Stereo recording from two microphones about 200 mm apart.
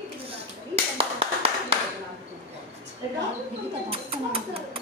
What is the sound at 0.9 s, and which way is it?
Clapping, 30° right (ahead or behind).